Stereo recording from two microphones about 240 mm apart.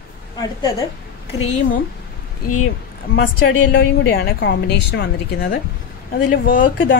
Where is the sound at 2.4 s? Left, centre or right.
Left.